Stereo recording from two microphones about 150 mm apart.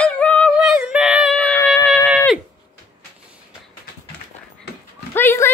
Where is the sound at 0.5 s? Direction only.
5° right (ahead or behind).